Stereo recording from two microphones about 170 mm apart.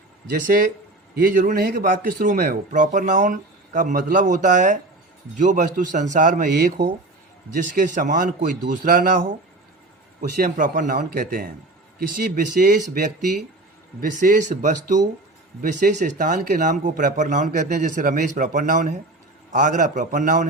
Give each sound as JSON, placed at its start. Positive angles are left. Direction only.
{"t": 0.4, "sound": "speech", "side_deg": -55}